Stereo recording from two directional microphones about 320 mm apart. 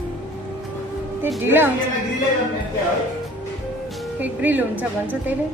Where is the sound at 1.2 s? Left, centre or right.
Centre.